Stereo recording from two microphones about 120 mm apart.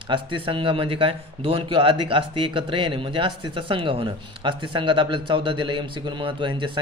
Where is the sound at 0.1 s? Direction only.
45° right (ahead or behind).